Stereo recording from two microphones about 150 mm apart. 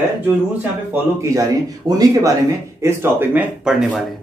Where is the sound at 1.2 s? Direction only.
20° right (ahead or behind); by 4.0 s 5° right (ahead or behind).